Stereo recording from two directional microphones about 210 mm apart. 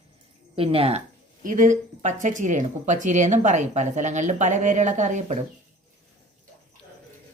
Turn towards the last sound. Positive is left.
turn(degrees=-35)  # may be behind; listen again after turning